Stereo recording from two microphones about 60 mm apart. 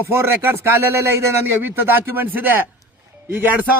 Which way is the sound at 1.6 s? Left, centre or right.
Right.